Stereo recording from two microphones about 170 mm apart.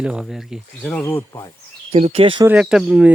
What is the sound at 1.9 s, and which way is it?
Speech, 40° right (ahead or behind).